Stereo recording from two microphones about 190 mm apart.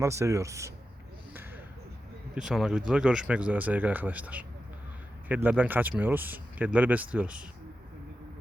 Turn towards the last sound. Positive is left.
turn(degrees=-5)  # may be behind; listen again after turning